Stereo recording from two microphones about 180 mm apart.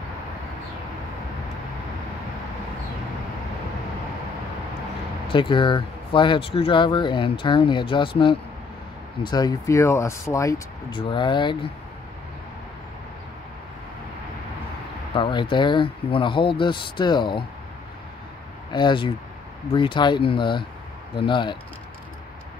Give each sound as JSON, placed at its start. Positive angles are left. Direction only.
{"t": 5.3, "sound": "speech", "side_deg": 25}
{"t": 15.1, "sound": "speech", "side_deg": 25}
{"t": 18.7, "sound": "speech", "side_deg": 25}